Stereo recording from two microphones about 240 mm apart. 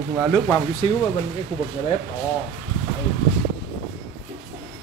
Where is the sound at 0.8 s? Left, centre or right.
Left.